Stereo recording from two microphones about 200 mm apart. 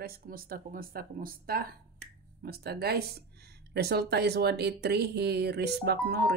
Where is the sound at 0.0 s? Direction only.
45° right (ahead or behind).